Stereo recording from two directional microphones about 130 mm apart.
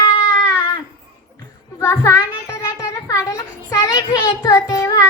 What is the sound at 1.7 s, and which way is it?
A child's voice, 25° left (ahead or behind).